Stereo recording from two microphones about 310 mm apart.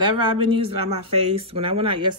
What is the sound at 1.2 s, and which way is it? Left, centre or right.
Speech, centre.